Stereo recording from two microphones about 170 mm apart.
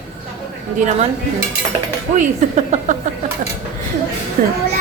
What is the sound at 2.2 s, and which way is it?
Speech, 45° right (ahead or behind).